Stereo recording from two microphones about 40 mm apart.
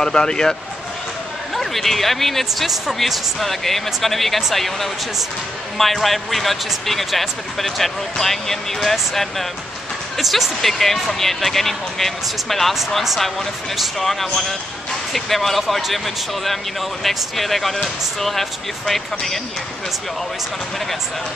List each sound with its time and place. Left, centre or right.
0.0 s speech: centre
1.5 s speech: centre
13.7 s speech: centre
17.0 s speech: centre